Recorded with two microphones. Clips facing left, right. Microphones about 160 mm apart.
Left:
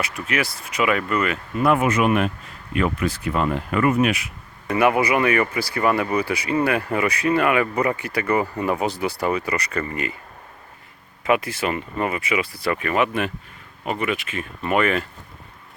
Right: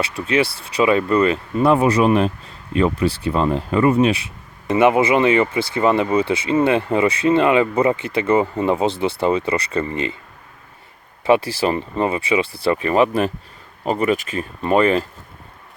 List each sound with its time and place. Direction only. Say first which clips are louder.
0.0 s speech: right 6 dB; 30° right (ahead or behind)
11.3 s speech: right 5 dB; 30° right (ahead or behind)